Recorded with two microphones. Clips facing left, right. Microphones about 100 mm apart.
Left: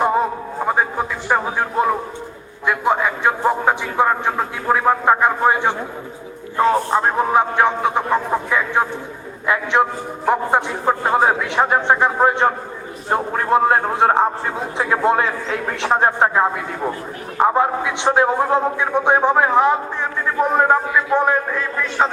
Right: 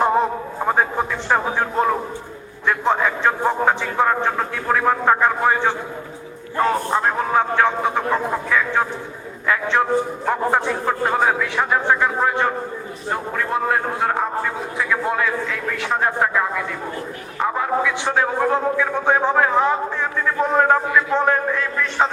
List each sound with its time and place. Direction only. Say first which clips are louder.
0.0 s a sound: even; 5° left (ahead or behind)
0.7 s a man's voice: even; 5° left (ahead or behind); by 16.5 s 35° left (ahead or behind)
17.5 s a man's voice: left 2 dB; 25° left (ahead or behind)